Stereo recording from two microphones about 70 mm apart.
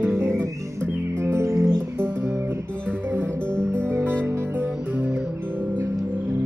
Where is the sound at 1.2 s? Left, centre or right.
Right.